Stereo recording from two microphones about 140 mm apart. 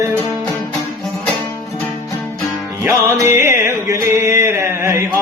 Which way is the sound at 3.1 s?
15° right (ahead or behind).